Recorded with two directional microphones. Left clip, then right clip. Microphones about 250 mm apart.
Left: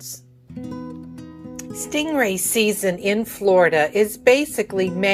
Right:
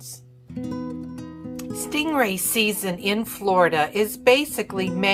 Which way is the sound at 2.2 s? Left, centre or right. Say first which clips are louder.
Left 2 dB; right.